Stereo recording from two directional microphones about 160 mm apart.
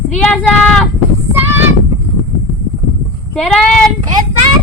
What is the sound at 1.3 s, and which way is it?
Child singing, 15° right (ahead or behind).